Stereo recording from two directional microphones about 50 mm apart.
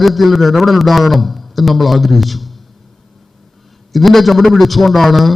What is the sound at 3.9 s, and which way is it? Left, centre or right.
A man's voice, centre.